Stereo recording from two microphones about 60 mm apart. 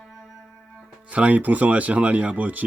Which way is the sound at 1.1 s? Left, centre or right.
Right.